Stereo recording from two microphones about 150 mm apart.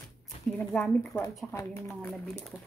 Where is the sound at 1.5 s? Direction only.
20° left (ahead or behind).